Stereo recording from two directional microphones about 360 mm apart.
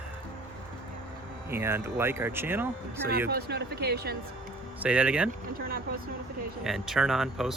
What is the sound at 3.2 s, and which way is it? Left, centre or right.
Speech, right.